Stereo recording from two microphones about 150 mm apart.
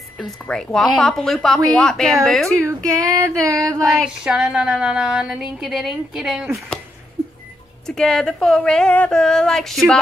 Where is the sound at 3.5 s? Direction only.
5° left (ahead or behind).